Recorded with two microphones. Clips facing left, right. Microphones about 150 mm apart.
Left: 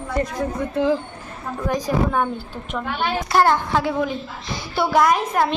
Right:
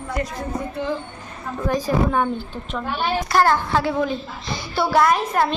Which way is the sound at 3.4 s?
15° left (ahead or behind).